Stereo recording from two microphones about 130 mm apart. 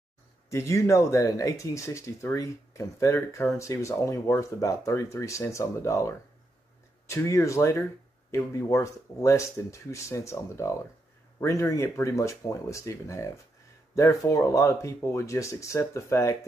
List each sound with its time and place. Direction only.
0.5 s speech: 25° left (ahead or behind)